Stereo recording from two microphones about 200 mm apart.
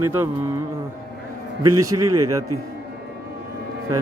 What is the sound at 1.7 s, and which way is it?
Speech, 15° right (ahead or behind).